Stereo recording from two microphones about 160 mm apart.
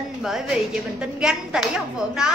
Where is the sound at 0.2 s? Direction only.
Centre (ahead or behind).